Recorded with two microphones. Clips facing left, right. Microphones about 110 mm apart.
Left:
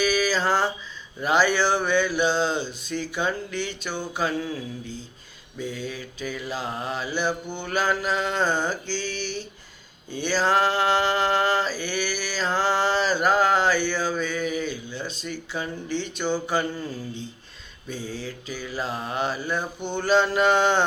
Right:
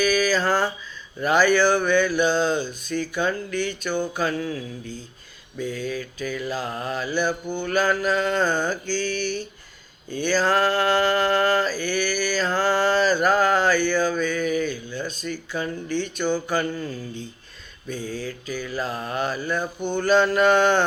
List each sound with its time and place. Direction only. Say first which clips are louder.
0.0 s a sound: right 2 dB; 25° left (ahead or behind)
1.2 s mantra: right 3 dB; 25° left (ahead or behind)
5.5 s mantra: right 4 dB; 20° left (ahead or behind)
10.2 s mantra: right 1 dB; 20° left (ahead or behind)
18.1 s mantra: right 3 dB; 25° left (ahead or behind)